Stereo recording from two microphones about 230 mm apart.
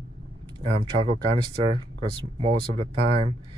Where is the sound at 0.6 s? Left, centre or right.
Right.